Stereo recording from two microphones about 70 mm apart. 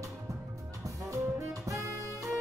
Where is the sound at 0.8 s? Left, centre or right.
Right.